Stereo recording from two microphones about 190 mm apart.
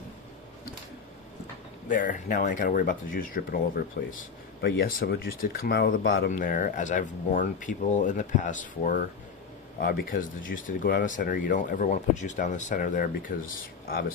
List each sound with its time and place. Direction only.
1.9 s speech: 45° left (ahead or behind); by 6.3 s 65° left (ahead or behind)
6.3 s speech: 45° left (ahead or behind)